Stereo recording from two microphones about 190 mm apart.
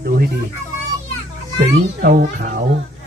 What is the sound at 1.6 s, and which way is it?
Speech, 45° right (ahead or behind).